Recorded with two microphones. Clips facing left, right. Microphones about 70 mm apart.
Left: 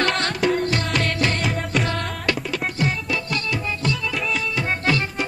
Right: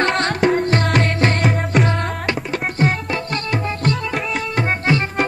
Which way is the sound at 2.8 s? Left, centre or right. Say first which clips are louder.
Right 6 dB; right.